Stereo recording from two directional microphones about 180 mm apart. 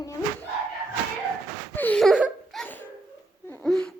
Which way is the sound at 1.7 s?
10° left (ahead or behind).